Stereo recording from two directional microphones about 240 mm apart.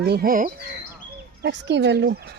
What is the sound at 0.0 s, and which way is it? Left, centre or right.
Speech, right.